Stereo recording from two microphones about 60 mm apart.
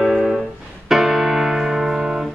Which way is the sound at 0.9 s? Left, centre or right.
Centre.